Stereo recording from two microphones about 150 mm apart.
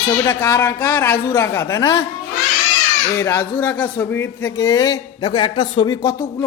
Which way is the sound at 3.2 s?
15° left (ahead or behind).